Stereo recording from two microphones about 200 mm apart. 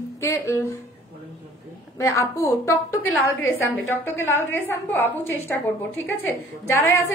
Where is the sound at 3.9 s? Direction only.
10° left (ahead or behind).